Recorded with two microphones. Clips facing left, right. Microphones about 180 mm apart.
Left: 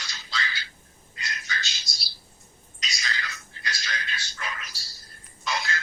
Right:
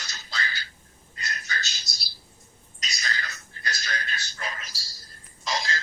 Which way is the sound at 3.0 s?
40° right (ahead or behind).